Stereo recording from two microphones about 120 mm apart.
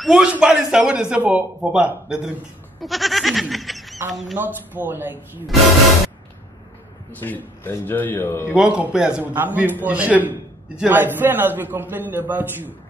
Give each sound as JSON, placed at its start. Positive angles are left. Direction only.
{"t": 0.0, "sound": "a man's voice", "side_deg": -5}
{"t": 2.8, "sound": "goat", "side_deg": 0}
{"t": 4.1, "sound": "speech", "side_deg": 0}
{"t": 4.4, "sound": "a man's voice", "side_deg": -15}
{"t": 7.1, "sound": "a man's voice", "side_deg": 15}
{"t": 8.5, "sound": "a man's voice", "side_deg": -5}